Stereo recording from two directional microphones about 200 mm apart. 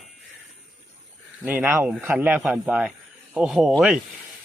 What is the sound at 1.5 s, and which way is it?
A man's voice, 10° right (ahead or behind).